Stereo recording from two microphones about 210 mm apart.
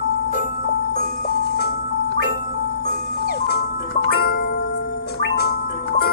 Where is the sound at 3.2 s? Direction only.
50° left (ahead or behind).